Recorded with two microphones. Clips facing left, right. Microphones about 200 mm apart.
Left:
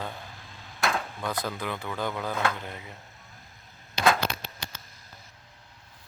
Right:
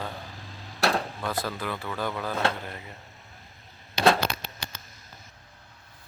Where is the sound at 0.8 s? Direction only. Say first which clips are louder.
Right 3 dB; 35° right (ahead or behind).